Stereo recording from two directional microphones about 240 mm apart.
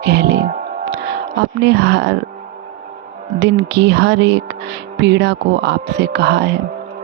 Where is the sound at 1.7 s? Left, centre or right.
Right.